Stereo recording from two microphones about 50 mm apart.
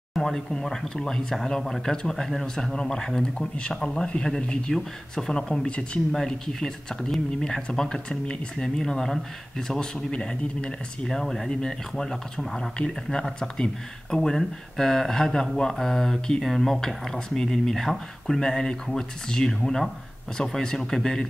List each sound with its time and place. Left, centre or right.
0.2 s speech: centre
12.7 s speech: centre